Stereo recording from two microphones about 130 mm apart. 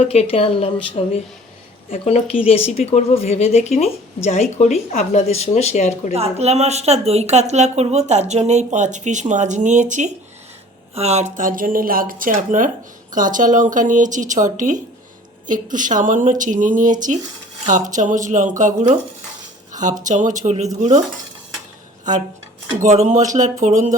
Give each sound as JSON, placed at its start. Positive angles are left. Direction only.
{"t": 0.0, "sound": "speech", "side_deg": 50}
{"t": 6.1, "sound": "speech", "side_deg": -55}
{"t": 10.9, "sound": "speech", "side_deg": -55}
{"t": 15.4, "sound": "speech", "side_deg": -90}
{"t": 22.8, "sound": "speech", "side_deg": -65}